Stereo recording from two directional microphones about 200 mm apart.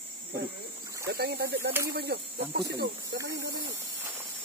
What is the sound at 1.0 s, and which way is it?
Speech, 55° right (ahead or behind).